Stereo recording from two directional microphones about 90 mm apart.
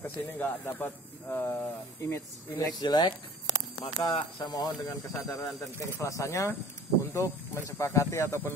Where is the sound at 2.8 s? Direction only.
50° left (ahead or behind).